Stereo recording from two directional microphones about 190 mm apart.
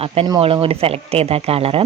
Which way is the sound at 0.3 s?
30° right (ahead or behind).